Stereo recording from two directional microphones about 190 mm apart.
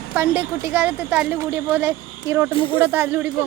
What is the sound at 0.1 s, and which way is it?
Speech, 10° right (ahead or behind).